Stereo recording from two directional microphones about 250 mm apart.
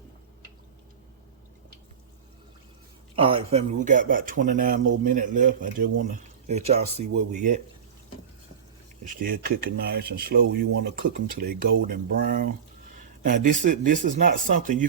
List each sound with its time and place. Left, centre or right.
3.2 s speech: right
9.0 s speech: right